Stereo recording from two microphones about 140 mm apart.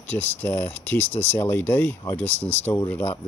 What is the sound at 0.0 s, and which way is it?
Speech, 10° left (ahead or behind).